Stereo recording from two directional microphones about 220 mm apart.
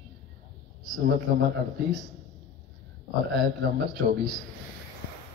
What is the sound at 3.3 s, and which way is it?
Speech, 45° right (ahead or behind).